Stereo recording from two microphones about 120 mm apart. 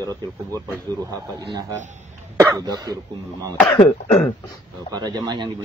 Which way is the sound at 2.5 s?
35° right (ahead or behind).